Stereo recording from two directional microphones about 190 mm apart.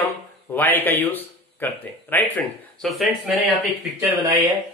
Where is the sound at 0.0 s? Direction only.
10° left (ahead or behind).